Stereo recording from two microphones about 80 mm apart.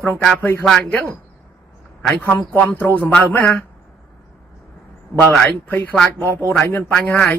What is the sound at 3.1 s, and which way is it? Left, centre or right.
Speech, centre.